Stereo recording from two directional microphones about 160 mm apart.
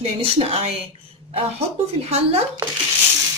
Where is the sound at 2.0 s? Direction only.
40° right (ahead or behind).